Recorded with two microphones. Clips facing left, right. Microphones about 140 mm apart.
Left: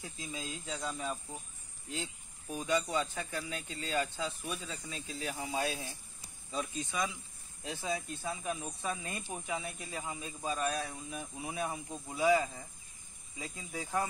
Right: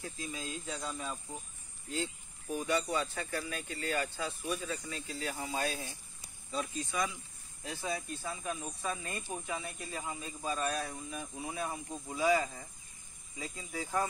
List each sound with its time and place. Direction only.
0.0 s speech: 20° left (ahead or behind)
2.6 s speech: 15° left (ahead or behind)